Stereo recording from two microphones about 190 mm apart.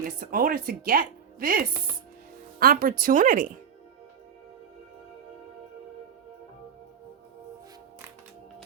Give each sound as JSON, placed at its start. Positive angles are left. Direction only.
{"t": 0.0, "sound": "a woman's voice", "side_deg": -45}